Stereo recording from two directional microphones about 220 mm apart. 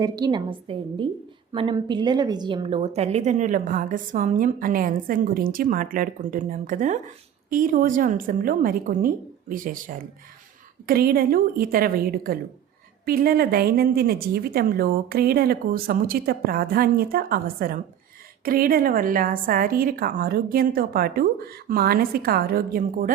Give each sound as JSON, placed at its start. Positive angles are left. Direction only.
{"t": 0.0, "sound": "a woman's voice", "side_deg": -20}